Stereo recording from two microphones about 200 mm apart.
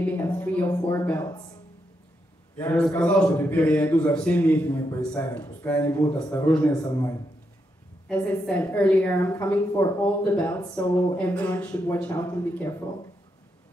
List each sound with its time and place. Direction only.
0.0 s a woman's voice: 10° left (ahead or behind)
2.5 s a woman's voice: 10° left (ahead or behind)
8.1 s a woman's voice: 5° left (ahead or behind)